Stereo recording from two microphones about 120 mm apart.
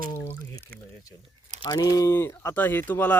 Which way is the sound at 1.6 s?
35° left (ahead or behind).